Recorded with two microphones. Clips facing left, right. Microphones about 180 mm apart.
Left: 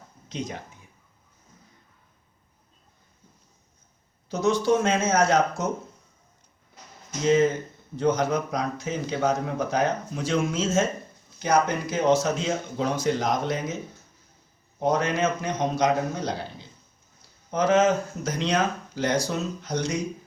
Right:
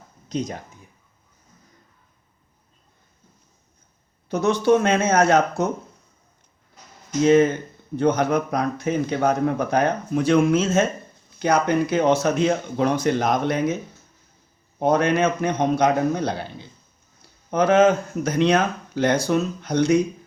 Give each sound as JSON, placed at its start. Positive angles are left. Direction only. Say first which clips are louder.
{"t": 0.3, "sound": "speech", "louder": "right 6 dB", "side_deg": -40}
{"t": 4.3, "sound": "speech", "louder": "right 4 dB", "side_deg": -60}
{"t": 7.9, "sound": "speech", "louder": "right 4 dB", "side_deg": -60}
{"t": 14.8, "sound": "speech", "louder": "right 5 dB", "side_deg": -60}